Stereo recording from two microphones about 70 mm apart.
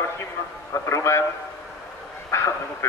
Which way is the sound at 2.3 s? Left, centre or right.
Left.